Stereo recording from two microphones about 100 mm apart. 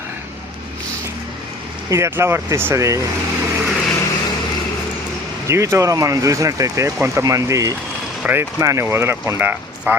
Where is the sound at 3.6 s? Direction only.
5° left (ahead or behind).